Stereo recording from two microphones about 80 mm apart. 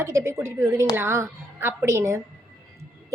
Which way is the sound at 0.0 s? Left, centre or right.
Right.